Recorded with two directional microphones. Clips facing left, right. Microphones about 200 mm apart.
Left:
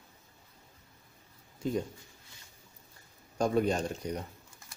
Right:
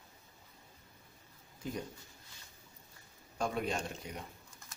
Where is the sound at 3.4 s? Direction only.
40° left (ahead or behind).